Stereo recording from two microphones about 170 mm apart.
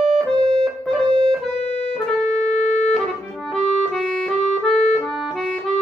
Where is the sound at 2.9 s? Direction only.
Centre (ahead or behind).